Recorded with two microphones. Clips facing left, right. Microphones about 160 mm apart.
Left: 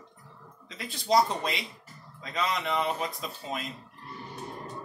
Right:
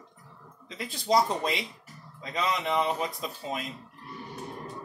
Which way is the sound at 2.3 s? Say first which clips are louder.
Right 1 dB; 20° right (ahead or behind).